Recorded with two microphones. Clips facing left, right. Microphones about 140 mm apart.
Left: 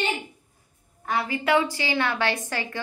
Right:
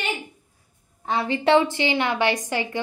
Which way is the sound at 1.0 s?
25° right (ahead or behind).